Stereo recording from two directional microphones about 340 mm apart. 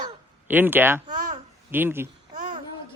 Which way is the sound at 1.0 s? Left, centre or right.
Right.